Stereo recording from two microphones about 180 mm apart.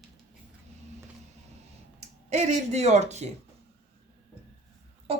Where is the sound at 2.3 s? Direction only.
40° right (ahead or behind).